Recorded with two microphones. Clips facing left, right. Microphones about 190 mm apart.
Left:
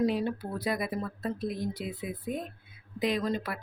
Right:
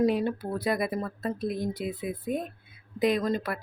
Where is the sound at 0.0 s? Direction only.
50° right (ahead or behind).